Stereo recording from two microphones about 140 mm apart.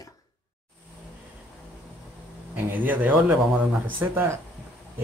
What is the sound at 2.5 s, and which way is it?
Speech, 10° right (ahead or behind).